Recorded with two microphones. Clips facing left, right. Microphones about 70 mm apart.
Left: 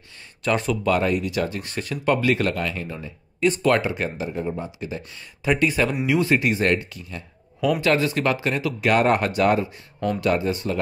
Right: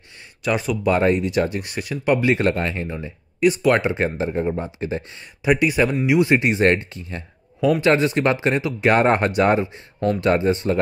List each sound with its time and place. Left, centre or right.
0.4 s speech: centre
0.8 s speech: right
2.3 s speech: right
4.3 s speech: right
5.4 s speech: centre